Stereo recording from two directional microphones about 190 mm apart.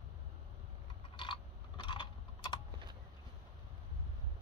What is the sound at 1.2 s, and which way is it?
Typing, 25° left (ahead or behind).